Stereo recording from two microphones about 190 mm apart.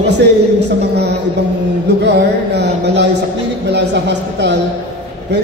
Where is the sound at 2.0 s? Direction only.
60° right (ahead or behind).